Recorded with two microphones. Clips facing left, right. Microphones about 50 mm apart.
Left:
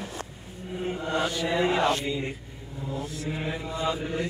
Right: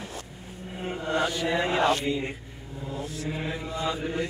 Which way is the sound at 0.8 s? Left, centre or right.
Centre.